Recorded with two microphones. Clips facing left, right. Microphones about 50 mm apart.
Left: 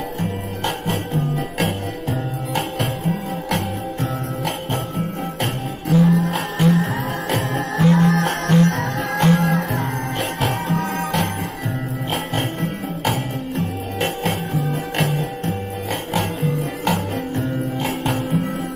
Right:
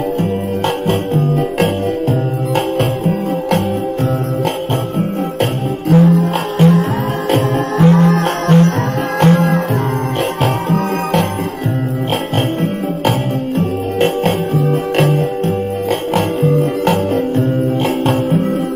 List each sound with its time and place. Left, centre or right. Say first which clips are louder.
0.8 s music: right 8 dB; right
4.9 s music: right 8 dB; right
7.8 s music: right 5 dB; right
8.1 s music: right 5 dB; right
13.6 s music: right 9 dB; right